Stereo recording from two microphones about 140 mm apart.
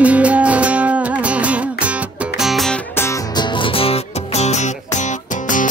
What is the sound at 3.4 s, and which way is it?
Music, 40° left (ahead or behind).